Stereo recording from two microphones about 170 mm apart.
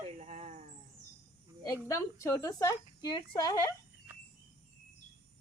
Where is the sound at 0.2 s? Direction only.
40° right (ahead or behind).